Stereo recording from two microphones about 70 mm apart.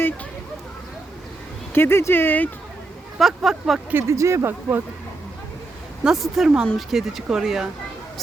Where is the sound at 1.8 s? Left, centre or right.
Left.